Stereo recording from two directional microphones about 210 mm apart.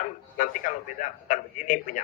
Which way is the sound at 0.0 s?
40° left (ahead or behind).